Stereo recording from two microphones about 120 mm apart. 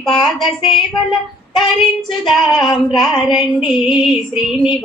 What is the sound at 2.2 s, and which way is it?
Female singing, 40° left (ahead or behind).